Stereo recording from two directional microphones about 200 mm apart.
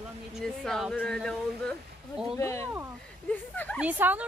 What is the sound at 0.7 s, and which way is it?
A woman's voice, centre (ahead or behind).